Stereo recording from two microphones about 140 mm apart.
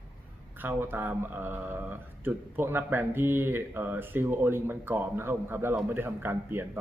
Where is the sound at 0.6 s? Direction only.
15° right (ahead or behind).